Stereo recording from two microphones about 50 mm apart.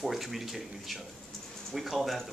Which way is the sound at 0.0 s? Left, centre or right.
Centre.